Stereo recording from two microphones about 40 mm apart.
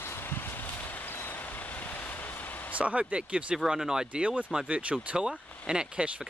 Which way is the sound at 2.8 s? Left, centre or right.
Right.